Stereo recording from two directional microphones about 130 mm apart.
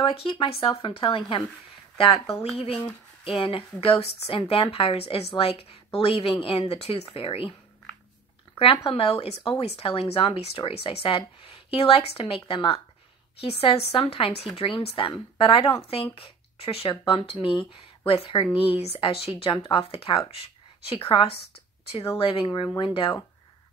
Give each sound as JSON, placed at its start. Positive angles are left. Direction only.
{"t": 0.0, "sound": "speech", "side_deg": 45}
{"t": 8.5, "sound": "speech", "side_deg": 45}